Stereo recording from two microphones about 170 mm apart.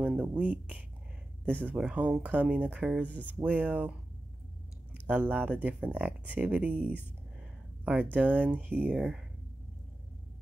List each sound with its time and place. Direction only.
0.0 s speech: 10° right (ahead or behind)
5.0 s speech: 10° right (ahead or behind)